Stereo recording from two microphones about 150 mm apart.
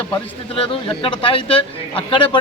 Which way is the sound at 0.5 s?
40° left (ahead or behind).